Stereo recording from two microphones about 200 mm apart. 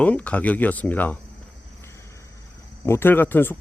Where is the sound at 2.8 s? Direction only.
10° left (ahead or behind).